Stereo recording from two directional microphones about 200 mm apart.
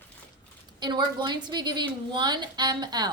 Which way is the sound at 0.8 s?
20° right (ahead or behind).